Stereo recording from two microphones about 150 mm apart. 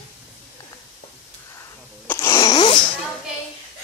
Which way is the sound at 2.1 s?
20° left (ahead or behind).